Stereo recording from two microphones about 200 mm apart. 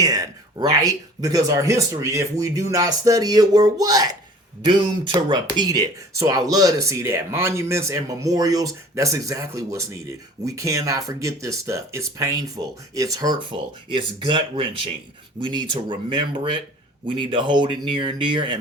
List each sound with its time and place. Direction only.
0.0 s speech: 15° right (ahead or behind)